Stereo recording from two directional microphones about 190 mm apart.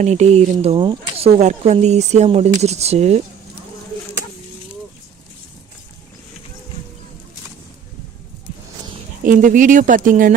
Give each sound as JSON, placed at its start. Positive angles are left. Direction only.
{"t": 0.0, "sound": "speech", "side_deg": -35}
{"t": 9.2, "sound": "speech", "side_deg": -45}